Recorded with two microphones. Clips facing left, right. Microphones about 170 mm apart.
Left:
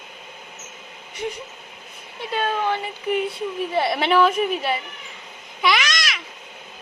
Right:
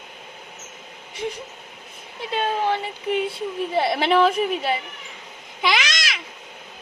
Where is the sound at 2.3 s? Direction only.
25° right (ahead or behind).